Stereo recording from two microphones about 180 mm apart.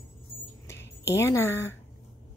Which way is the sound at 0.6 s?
15° left (ahead or behind).